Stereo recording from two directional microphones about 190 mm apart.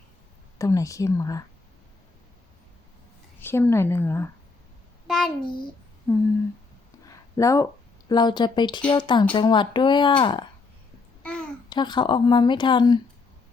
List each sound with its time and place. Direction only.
0.6 s a woman's voice: 15° left (ahead or behind)
3.4 s a woman's voice: 10° left (ahead or behind)
5.0 s a child's voice: centre (ahead or behind)
7.3 s a woman's voice: 15° left (ahead or behind)
11.2 s babbling: 5° left (ahead or behind)
11.7 s speech: 25° left (ahead or behind)